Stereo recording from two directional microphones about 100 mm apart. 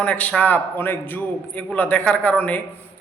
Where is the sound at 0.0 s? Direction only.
15° left (ahead or behind).